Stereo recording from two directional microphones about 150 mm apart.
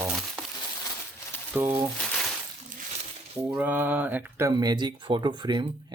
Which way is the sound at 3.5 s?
10° right (ahead or behind).